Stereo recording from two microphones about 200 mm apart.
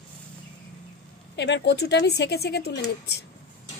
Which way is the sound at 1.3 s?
60° left (ahead or behind).